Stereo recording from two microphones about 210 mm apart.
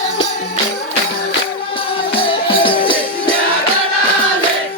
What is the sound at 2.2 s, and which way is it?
Music, 25° left (ahead or behind).